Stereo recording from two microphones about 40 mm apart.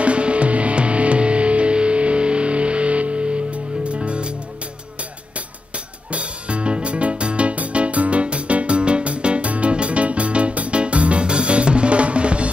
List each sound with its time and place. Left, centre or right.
0.0 s music: right
6.1 s music: right